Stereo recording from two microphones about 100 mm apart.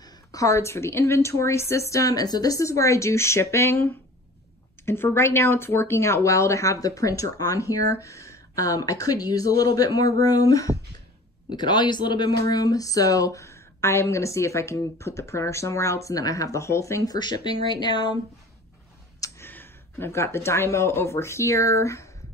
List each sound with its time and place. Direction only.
0.0 s a woman's voice: 35° left (ahead or behind)
11.5 s speech: 45° left (ahead or behind)
19.1 s a sound: 35° left (ahead or behind)
19.4 s speech: 20° left (ahead or behind)